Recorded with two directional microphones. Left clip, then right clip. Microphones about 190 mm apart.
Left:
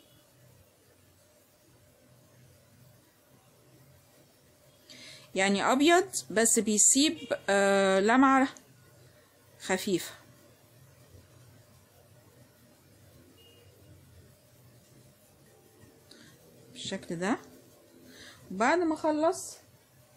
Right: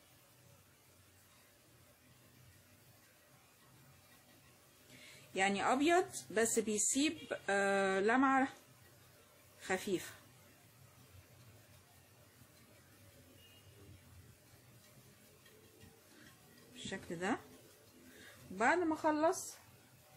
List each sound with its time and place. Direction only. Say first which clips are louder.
5.3 s a woman's voice: left 7 dB; 35° left (ahead or behind)
9.6 s speech: left 8 dB; 35° left (ahead or behind)
16.7 s speech: left 8 dB; 30° left (ahead or behind)
18.6 s a woman's voice: left 6 dB; 30° left (ahead or behind)